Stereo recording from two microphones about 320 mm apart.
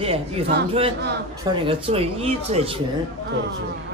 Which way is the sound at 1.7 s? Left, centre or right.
Centre.